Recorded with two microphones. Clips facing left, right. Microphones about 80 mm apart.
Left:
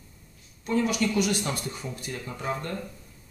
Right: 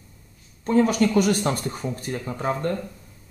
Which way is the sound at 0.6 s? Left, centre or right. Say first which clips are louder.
Right 6 dB; right.